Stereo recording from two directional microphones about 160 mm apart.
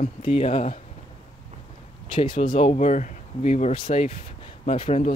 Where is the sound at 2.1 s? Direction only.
30° left (ahead or behind).